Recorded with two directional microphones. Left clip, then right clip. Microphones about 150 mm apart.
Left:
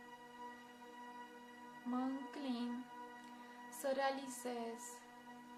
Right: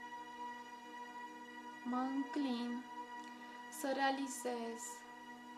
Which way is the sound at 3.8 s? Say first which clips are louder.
Right 2 dB; 35° right (ahead or behind).